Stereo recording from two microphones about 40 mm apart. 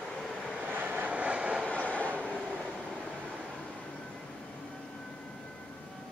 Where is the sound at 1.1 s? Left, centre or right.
Right.